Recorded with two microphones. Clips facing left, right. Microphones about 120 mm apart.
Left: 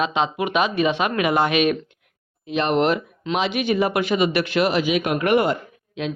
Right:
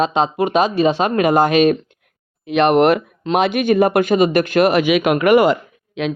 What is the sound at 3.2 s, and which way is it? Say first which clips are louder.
A man's voice: right 6 dB; 50° right (ahead or behind).